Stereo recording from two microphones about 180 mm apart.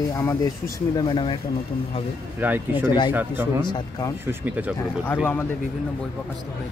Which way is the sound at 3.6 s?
25° left (ahead or behind).